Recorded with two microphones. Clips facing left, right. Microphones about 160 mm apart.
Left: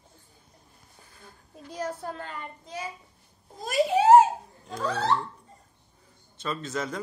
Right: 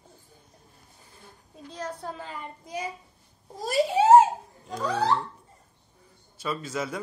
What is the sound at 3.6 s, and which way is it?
Speech, 30° right (ahead or behind).